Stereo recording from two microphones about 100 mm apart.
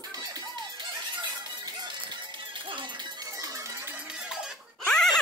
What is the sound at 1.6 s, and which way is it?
Music, 45° right (ahead or behind).